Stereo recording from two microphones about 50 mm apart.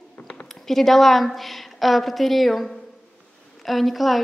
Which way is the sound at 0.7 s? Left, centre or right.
Centre.